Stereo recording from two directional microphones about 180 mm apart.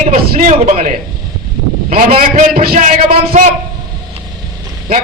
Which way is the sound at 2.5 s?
50° right (ahead or behind).